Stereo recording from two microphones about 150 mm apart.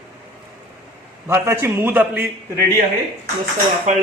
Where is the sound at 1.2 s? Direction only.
15° right (ahead or behind).